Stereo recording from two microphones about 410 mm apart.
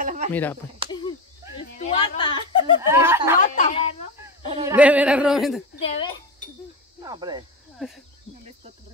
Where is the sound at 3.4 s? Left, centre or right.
Centre.